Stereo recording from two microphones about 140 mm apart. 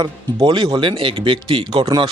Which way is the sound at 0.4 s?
30° right (ahead or behind).